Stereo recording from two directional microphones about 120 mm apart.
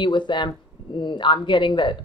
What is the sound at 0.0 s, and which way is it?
Speech, 40° left (ahead or behind).